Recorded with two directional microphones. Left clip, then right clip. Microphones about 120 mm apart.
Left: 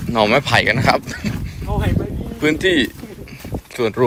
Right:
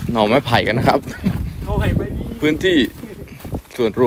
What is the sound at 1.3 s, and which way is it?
Dog, centre (ahead or behind).